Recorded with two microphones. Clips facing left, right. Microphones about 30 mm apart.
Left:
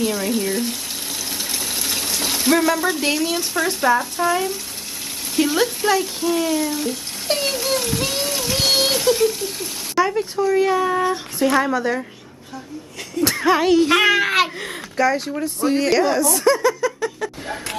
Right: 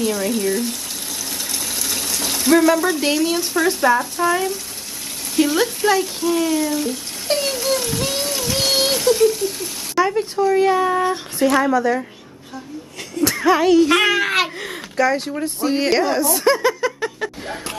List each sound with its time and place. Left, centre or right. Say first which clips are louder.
0.0 s speech: right 1 dB; centre
11.6 s speech: right 3 dB; centre
13.2 s speech: right 1 dB; centre; by 17.3 s right